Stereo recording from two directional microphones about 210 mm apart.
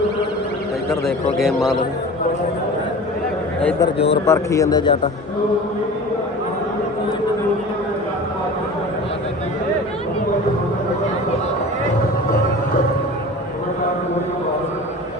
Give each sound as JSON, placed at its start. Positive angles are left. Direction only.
{"t": 1.4, "sound": "a man's voice", "side_deg": 0}
{"t": 3.6, "sound": "speech", "side_deg": 5}
{"t": 3.8, "sound": "speech", "side_deg": 25}
{"t": 4.3, "sound": "speech", "side_deg": 15}